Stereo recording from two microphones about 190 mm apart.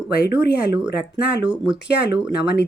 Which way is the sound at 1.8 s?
60° left (ahead or behind).